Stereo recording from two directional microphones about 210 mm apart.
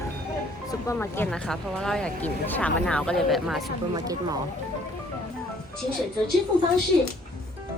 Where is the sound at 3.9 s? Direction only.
15° right (ahead or behind).